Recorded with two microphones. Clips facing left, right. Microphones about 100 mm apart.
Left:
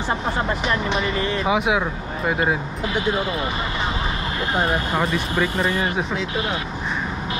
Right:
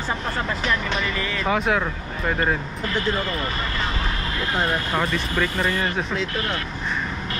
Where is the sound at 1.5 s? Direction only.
10° left (ahead or behind).